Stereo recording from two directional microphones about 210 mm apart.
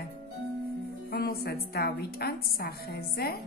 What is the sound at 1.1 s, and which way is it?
A woman's voice, 45° left (ahead or behind).